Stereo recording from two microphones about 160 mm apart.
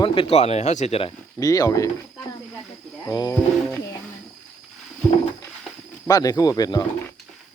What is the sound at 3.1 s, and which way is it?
Speech, 20° left (ahead or behind).